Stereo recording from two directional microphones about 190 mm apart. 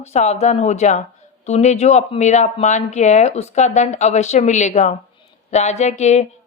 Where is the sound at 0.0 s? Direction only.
35° left (ahead or behind).